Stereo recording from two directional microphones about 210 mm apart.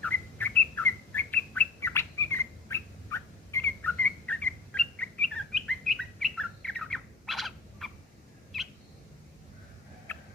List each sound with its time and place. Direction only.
0.0 s bird: 10° left (ahead or behind)
10.1 s tick-tock: 10° left (ahead or behind)